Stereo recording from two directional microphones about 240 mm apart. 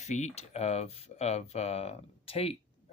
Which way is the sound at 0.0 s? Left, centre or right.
Left.